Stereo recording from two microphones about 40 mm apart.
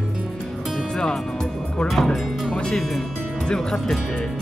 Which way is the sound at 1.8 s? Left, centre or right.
Centre.